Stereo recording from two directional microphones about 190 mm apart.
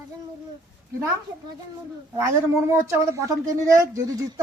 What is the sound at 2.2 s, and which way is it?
Speech, 15° right (ahead or behind).